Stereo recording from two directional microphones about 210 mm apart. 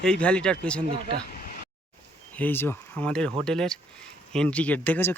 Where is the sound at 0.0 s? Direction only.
5° left (ahead or behind).